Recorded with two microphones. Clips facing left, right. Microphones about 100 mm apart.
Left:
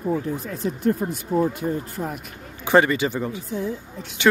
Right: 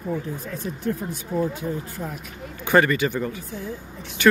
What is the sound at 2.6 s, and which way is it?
Speech, 25° left (ahead or behind).